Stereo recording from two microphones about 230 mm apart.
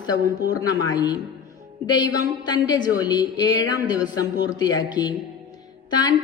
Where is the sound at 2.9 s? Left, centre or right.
Centre.